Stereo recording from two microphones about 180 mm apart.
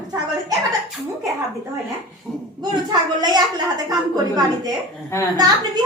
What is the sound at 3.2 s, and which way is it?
A woman's voice, 25° right (ahead or behind).